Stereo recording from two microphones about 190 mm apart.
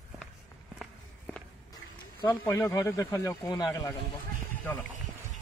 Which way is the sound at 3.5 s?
20° left (ahead or behind).